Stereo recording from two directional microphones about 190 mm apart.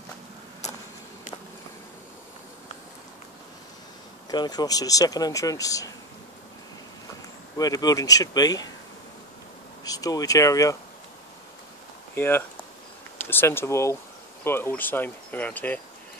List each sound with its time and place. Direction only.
4.3 s speech: 20° left (ahead or behind)
7.5 s speech: 20° left (ahead or behind)
9.8 s speech: 20° left (ahead or behind)
12.2 s speech: 10° left (ahead or behind)